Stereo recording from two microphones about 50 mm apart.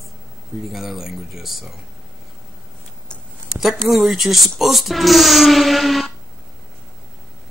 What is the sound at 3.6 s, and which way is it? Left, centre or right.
Speech, centre.